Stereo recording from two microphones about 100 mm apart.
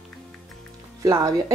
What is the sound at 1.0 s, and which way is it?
Speech, 35° right (ahead or behind).